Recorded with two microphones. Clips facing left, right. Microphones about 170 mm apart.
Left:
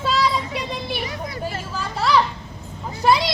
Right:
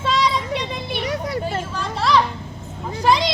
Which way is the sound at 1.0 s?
75° right (ahead or behind).